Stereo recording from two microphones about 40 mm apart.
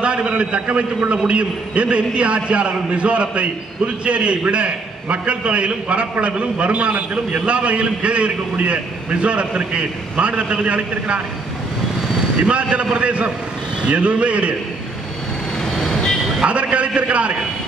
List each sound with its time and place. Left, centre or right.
0.0 s a man's voice: right
12.4 s a man's voice: right
15.7 s vehicle: centre
16.4 s a man's voice: right